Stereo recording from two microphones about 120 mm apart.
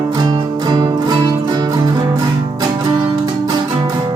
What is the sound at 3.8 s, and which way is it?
Music, 35° right (ahead or behind).